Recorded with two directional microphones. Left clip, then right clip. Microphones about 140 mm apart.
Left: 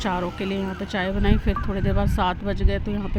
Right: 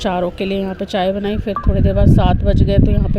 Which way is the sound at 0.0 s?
30° right (ahead or behind).